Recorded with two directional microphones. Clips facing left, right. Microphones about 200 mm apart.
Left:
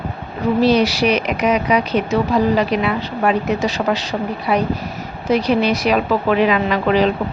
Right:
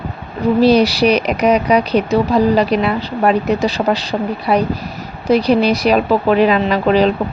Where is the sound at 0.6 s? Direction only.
35° right (ahead or behind).